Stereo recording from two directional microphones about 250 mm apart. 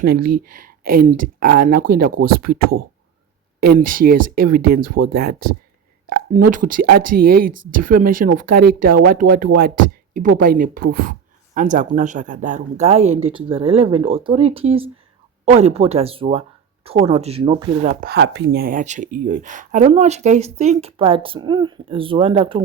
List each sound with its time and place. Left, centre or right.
0.0 s speech: right
18.0 s speech: right; by 22.6 s centre